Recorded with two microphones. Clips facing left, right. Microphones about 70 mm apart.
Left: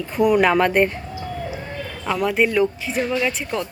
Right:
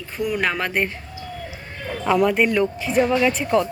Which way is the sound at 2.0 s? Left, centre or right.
Centre.